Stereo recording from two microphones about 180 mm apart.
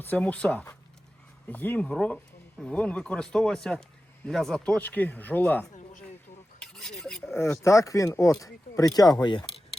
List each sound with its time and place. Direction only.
0.0 s speech: 10° left (ahead or behind)
6.6 s filing: 5° left (ahead or behind)
7.3 s speech: 15° left (ahead or behind)